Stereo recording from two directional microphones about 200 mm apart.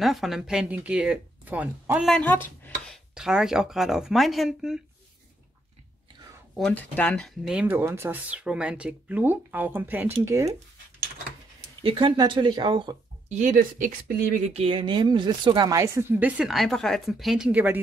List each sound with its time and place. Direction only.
0.0 s speech: centre (ahead or behind)
2.1 s a sound: 10° left (ahead or behind)
3.2 s speech: 5° right (ahead or behind)
6.5 s speech: 5° left (ahead or behind); by 10.5 s 15° right (ahead or behind)
11.8 s speech: 25° right (ahead or behind)
13.3 s speech: 40° right (ahead or behind)
14.5 s speech: 25° right (ahead or behind); by 17.7 s 5° right (ahead or behind)